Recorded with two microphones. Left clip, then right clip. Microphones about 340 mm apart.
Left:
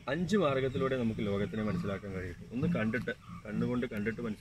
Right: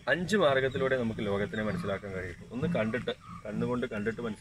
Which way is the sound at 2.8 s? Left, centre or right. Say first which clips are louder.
Right 2 dB; right.